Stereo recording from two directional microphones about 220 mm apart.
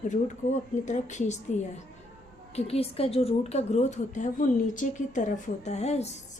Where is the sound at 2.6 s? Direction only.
25° left (ahead or behind).